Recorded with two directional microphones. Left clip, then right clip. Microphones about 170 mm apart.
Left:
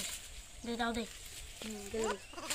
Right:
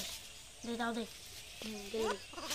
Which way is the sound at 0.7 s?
30° left (ahead or behind).